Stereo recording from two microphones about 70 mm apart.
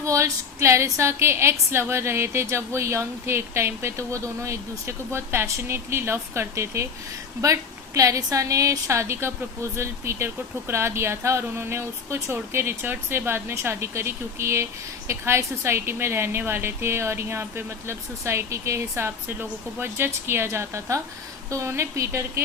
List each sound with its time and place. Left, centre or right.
0.0 s speech: right
7.4 s a woman's voice: right